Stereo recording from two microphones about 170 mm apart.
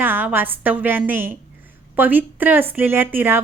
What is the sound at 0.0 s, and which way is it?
A woman's voice, 10° right (ahead or behind).